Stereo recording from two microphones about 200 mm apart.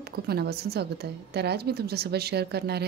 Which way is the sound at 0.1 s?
50° right (ahead or behind).